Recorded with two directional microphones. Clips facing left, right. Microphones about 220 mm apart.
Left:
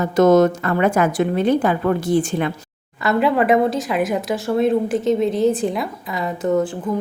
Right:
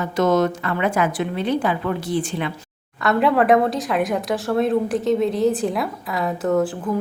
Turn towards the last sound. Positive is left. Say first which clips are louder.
# left 1 dB
turn(degrees=0)  # may be behind; listen again after turning